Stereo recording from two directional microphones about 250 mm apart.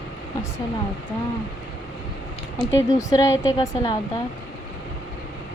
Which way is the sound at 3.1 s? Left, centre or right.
Centre.